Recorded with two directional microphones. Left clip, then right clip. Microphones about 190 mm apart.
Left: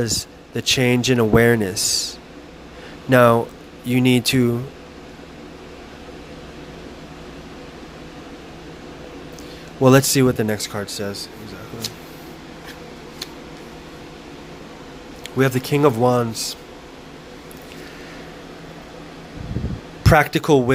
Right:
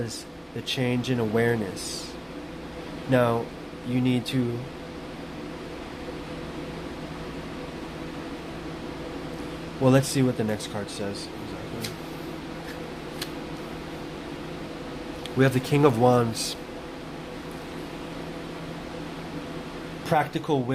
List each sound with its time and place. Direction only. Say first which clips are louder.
0.0 s a man's voice: left 10 dB; 40° left (ahead or behind)
9.8 s speech: left 8 dB; 40° left (ahead or behind)
15.4 s speech: left 4 dB; 25° left (ahead or behind)
20.1 s a man's voice: left 9 dB; 50° left (ahead or behind)